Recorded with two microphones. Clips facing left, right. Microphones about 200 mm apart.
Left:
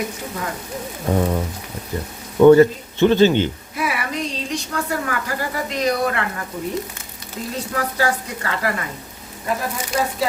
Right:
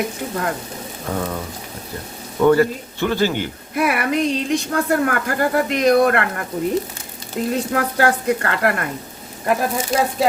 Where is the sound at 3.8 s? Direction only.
55° right (ahead or behind).